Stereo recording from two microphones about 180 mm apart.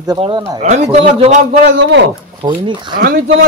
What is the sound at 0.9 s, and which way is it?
Speech, 35° right (ahead or behind).